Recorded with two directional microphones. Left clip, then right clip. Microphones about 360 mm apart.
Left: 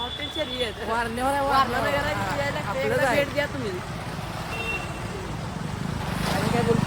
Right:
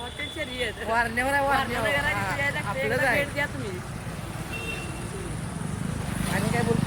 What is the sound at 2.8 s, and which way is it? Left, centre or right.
Speech, centre.